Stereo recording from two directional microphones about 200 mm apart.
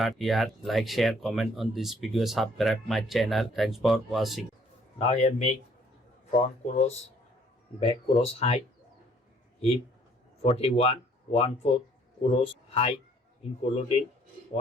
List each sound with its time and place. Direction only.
0.0 s speech: centre (ahead or behind)
4.9 s speech: 35° left (ahead or behind)
6.7 s speech: 35° left (ahead or behind)
10.4 s speech: 30° left (ahead or behind)